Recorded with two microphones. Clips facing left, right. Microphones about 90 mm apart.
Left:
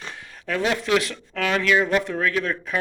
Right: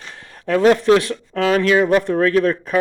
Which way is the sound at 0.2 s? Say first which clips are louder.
Right 10 dB; 40° right (ahead or behind).